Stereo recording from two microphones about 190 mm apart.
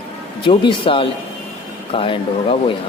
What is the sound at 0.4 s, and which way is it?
Speech, 25° left (ahead or behind).